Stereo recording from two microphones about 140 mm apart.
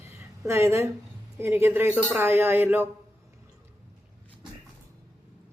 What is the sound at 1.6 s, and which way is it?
Speech, 15° right (ahead or behind).